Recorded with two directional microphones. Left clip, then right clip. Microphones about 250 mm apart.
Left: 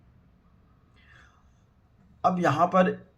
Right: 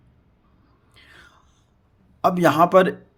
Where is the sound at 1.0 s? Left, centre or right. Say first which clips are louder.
Right 8 dB; right.